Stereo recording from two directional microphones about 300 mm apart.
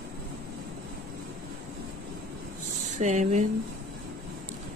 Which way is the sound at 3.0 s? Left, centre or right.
Right.